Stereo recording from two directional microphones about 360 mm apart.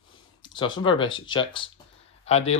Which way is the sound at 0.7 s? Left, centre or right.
Centre.